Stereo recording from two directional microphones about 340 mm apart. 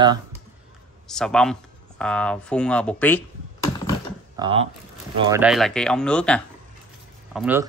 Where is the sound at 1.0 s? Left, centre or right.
Centre.